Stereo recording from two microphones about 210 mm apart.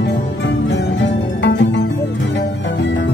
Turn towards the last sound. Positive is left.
turn(degrees=60)  # may be behind; listen again after turning